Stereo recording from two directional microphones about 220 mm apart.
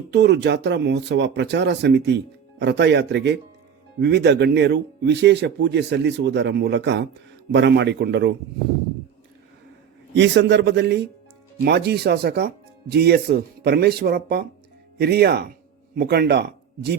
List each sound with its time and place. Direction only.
0.1 s speech: 50° right (ahead or behind)
10.2 s speech: 50° right (ahead or behind)